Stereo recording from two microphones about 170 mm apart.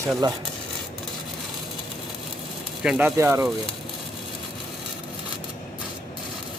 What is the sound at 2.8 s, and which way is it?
Speech, 10° right (ahead or behind).